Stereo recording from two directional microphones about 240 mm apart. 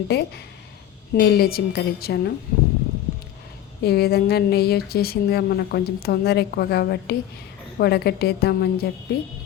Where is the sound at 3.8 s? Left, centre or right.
Left.